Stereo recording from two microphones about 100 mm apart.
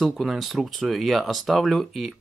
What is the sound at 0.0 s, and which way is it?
Speech, centre (ahead or behind).